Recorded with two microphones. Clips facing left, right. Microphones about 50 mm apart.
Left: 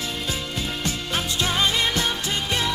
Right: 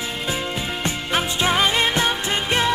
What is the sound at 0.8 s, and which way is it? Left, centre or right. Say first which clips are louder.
Music: right 6 dB; right.